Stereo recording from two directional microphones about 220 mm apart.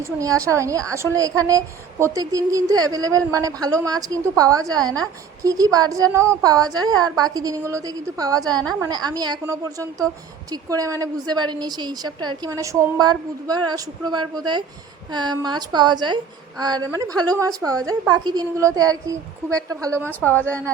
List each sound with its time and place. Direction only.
0.0 s a woman's voice: 15° right (ahead or behind)
20.1 s a woman's voice: 10° left (ahead or behind)